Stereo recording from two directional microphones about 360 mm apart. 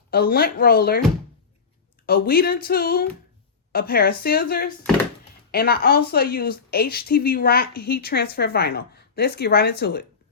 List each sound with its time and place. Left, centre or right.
0.1 s a woman's voice: left
2.0 s a woman's voice: left